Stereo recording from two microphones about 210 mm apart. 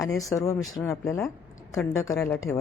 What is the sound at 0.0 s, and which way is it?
Speech, 15° left (ahead or behind).